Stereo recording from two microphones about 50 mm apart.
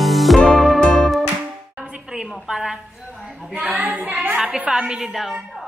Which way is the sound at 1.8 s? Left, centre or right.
Centre.